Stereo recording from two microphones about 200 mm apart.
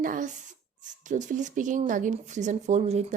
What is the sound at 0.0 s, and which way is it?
A woman's voice, 40° right (ahead or behind).